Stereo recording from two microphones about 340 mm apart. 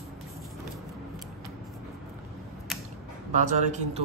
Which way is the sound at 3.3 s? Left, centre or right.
Right.